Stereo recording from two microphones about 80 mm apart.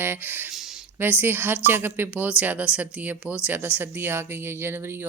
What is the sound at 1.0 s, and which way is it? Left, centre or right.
Speech, right.